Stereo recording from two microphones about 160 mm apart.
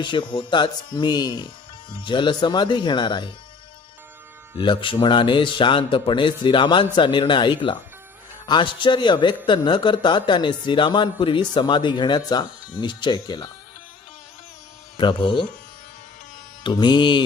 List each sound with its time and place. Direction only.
0.0 s speech: 30° left (ahead or behind)
4.5 s speech: 30° left (ahead or behind)
14.9 s speech: 30° left (ahead or behind)
16.6 s speech: 30° left (ahead or behind)